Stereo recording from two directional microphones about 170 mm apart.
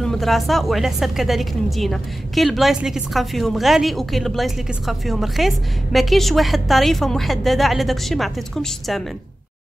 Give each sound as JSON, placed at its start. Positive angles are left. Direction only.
{"t": 0.0, "sound": "a woman's voice", "side_deg": 0}